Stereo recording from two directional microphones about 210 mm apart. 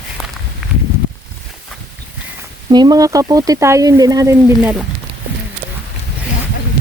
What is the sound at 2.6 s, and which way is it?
Speech, 20° right (ahead or behind).